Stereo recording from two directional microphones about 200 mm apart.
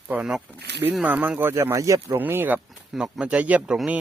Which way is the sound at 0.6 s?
55° right (ahead or behind).